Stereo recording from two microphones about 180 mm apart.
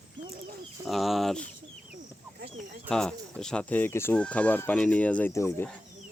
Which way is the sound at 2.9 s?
5° left (ahead or behind).